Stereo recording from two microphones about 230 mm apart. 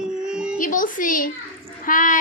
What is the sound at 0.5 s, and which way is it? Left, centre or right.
Speech, left.